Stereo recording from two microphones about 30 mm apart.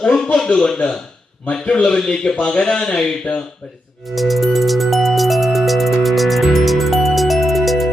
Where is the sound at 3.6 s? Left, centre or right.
Left.